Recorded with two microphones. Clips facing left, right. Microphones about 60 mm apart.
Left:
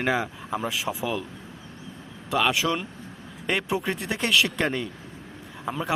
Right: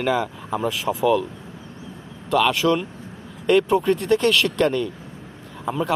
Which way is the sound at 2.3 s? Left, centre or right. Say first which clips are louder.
Right 5 dB; centre.